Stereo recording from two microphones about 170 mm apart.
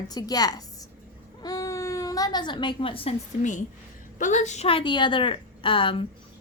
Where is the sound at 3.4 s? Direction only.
45° left (ahead or behind); by 6.0 s 30° left (ahead or behind).